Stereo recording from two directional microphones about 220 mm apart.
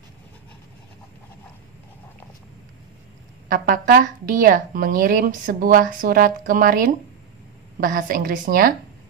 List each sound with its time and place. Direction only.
3.4 s speech: 40° right (ahead or behind)